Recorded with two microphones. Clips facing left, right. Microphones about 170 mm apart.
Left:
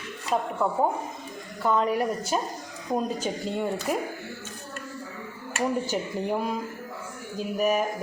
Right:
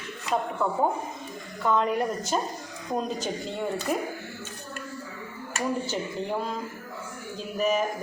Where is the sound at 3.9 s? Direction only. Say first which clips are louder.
Even; 5° left (ahead or behind).